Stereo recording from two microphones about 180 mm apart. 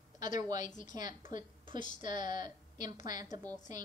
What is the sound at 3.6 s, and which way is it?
Speech, 45° left (ahead or behind).